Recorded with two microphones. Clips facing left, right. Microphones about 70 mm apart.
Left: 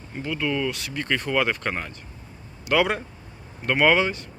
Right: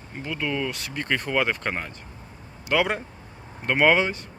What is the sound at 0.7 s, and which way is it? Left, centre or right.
Speech, right.